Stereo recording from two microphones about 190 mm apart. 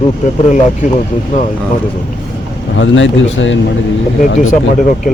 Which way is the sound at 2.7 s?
80° left.